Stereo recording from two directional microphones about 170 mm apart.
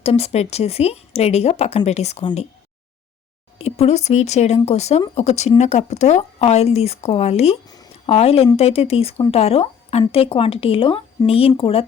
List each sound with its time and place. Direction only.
0.0 s speech: 35° left (ahead or behind)
3.6 s speech: 40° left (ahead or behind)